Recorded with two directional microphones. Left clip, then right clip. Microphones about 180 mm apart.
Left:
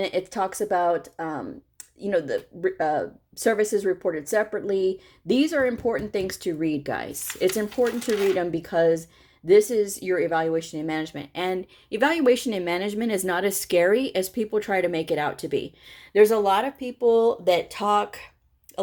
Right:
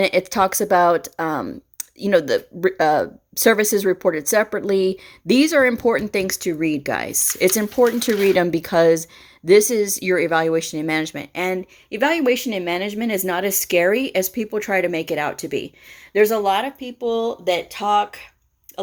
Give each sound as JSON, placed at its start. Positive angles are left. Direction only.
{"t": 0.0, "sound": "speech", "side_deg": -30}
{"t": 11.9, "sound": "a woman's voice", "side_deg": -5}